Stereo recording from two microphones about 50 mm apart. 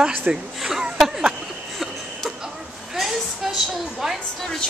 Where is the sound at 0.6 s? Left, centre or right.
Centre.